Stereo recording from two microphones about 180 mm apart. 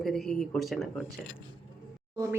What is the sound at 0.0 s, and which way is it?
Speech, centre (ahead or behind).